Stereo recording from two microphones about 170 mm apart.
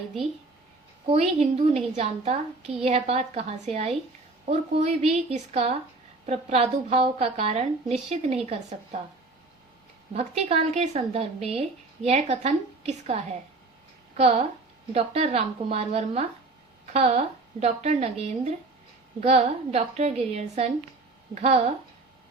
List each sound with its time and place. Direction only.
1.0 s a woman's voice: 35° right (ahead or behind)
10.2 s a woman's voice: 35° right (ahead or behind)
14.2 s a woman's voice: 35° right (ahead or behind)